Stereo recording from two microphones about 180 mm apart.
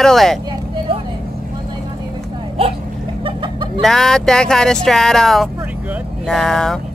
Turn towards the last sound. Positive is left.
turn(degrees=0)  # may be behind; listen again after turning